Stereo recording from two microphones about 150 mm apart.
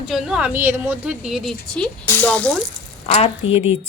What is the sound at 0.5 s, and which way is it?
Speech, 15° right (ahead or behind).